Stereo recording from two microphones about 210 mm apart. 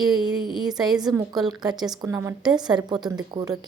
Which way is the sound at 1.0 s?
20° right (ahead or behind).